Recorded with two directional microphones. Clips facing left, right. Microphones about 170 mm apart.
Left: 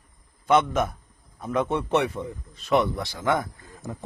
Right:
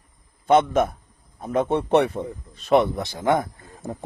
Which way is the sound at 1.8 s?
60° right (ahead or behind).